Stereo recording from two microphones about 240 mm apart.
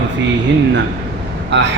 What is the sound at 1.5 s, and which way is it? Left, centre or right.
Speech, right.